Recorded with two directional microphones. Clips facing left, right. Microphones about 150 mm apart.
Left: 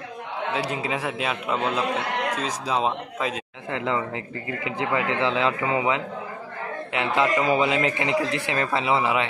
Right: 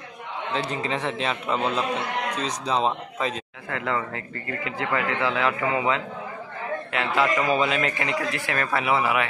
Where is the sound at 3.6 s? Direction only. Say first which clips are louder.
Left 2 dB; 20° left (ahead or behind).